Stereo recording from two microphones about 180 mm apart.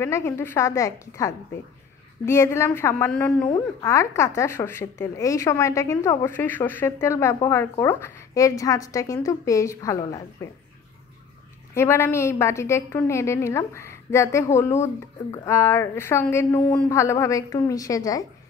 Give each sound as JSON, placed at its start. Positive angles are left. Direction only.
{"t": 0.0, "sound": "a woman's voice", "side_deg": 15}
{"t": 11.7, "sound": "a woman's voice", "side_deg": 15}